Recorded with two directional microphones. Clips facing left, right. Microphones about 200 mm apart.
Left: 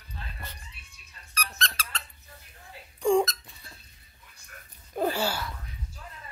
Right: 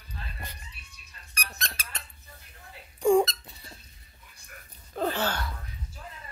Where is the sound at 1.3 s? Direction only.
10° right (ahead or behind).